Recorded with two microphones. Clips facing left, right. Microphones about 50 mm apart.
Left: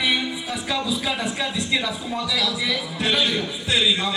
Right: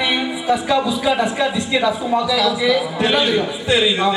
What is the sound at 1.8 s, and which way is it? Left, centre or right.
A woman's voice, centre.